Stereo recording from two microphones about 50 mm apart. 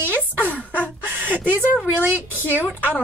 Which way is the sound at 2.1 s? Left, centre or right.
Right.